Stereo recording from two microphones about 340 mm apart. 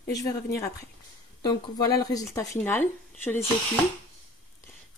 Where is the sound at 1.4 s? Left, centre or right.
Centre.